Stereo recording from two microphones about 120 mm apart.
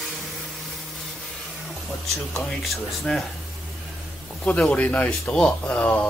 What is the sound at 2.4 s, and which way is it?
Speech, centre (ahead or behind).